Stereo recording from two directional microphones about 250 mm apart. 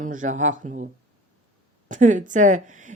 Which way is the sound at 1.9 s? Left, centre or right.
Right.